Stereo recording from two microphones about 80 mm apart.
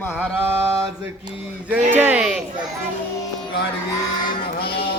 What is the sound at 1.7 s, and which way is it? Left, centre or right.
Speech, right.